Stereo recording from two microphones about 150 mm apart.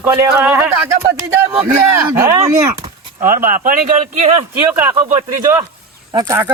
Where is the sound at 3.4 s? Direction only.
65° right (ahead or behind).